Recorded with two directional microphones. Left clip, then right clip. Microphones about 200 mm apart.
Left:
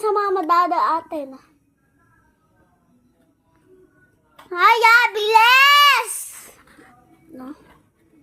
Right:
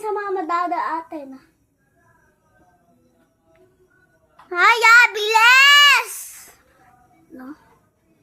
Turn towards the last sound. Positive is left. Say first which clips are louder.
# left 2 dB
turn(degrees=-5)  # may be behind; listen again after turning